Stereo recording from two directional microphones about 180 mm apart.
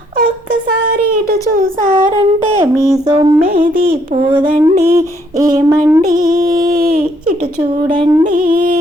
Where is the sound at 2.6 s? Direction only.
15° right (ahead or behind).